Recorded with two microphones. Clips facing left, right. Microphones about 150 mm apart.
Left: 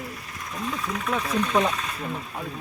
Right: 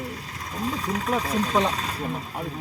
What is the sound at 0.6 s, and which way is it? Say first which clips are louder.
Speech: right 2 dB; 35° right (ahead or behind).